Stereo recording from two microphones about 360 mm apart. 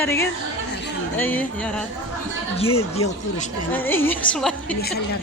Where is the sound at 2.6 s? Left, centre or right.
Centre.